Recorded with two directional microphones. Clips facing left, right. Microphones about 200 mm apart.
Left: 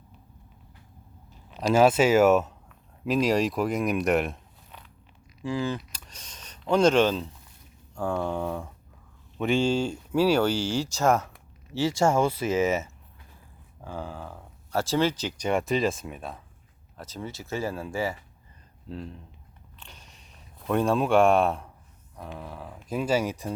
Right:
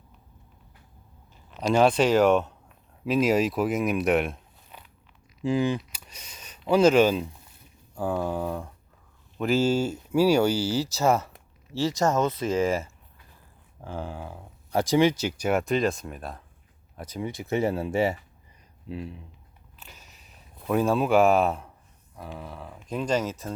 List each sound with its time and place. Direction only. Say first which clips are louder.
1.3 s speech: even; 5° left (ahead or behind)
5.4 s speech: right 4 dB; 20° right (ahead or behind)
12.0 s speech: left 1 dB; 10° left (ahead or behind)
13.8 s speech: right 1 dB; 10° right (ahead or behind)
17.0 s speech: right 4 dB; 15° right (ahead or behind)
18.9 s speech: right 2 dB; 10° right (ahead or behind)
19.8 s a sound: right 1 dB; 5° right (ahead or behind)
22.1 s speech: even; centre (ahead or behind)